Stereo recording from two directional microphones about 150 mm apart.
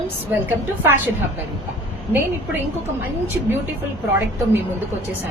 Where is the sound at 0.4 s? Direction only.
15° right (ahead or behind).